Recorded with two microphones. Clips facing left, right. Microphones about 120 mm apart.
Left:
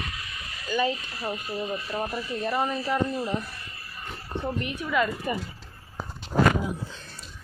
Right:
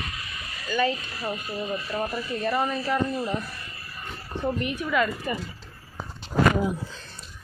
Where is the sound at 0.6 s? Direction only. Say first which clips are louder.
Right 1 dB; 10° left (ahead or behind).